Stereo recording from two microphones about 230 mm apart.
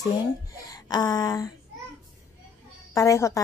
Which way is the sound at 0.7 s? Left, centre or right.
Centre.